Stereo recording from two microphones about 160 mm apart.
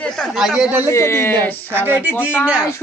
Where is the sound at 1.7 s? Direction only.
10° right (ahead or behind).